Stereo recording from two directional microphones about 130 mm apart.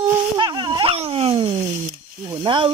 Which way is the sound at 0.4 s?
35° right (ahead or behind).